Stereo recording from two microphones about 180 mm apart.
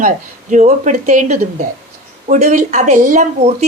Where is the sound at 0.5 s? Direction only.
40° right (ahead or behind).